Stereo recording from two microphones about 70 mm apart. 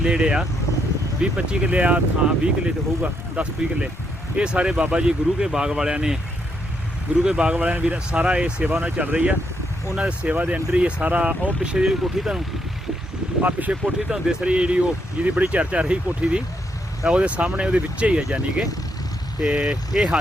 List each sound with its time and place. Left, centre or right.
0.0 s speech: centre
7.2 s speech: centre
13.4 s speech: right